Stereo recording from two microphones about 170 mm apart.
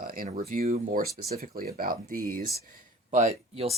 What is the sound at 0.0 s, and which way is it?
Speech, 55° right (ahead or behind).